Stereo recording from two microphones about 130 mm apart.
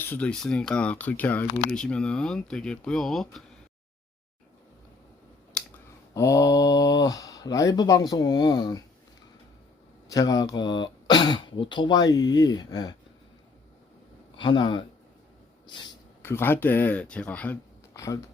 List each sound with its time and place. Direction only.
0.0 s speech: 10° left (ahead or behind)
5.6 s clicking: 5° left (ahead or behind)
6.1 s speech: 25° left (ahead or behind)
10.1 s speech: 25° left (ahead or behind)
14.3 s speech: 40° left (ahead or behind)
16.2 s speech: 15° left (ahead or behind)
17.9 s speech: 25° left (ahead or behind)